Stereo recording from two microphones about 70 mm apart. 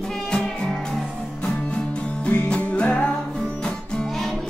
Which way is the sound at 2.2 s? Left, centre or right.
Centre.